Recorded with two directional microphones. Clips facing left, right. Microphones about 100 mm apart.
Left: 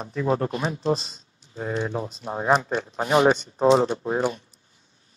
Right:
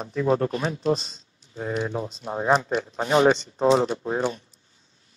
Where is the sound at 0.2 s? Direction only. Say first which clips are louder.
Right 1 dB; 25° left (ahead or behind).